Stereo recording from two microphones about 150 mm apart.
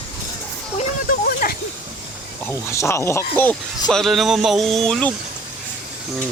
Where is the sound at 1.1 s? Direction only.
70° left (ahead or behind).